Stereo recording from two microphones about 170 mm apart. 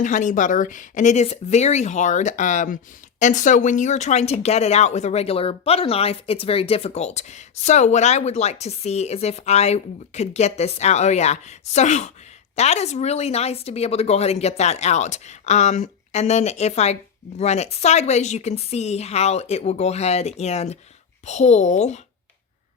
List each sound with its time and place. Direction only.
0.0 s speech: 50° left (ahead or behind)